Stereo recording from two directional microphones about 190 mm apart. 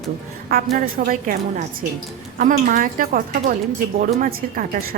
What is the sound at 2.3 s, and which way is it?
A woman's voice, 45° right (ahead or behind).